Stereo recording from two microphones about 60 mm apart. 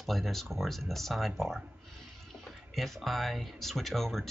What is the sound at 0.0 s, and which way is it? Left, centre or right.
Speech, centre.